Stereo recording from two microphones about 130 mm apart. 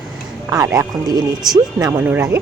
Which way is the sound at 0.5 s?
25° right (ahead or behind).